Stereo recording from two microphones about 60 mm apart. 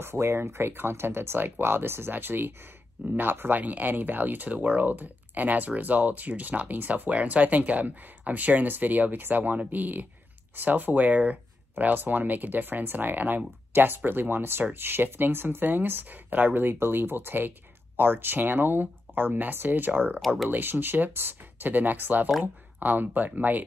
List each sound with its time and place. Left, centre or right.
0.0 s speech: right